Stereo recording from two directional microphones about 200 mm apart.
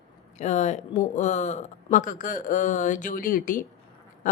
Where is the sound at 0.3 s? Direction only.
35° left (ahead or behind).